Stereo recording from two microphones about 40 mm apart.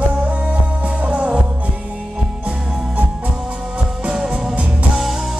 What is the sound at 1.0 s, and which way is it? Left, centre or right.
Music, right.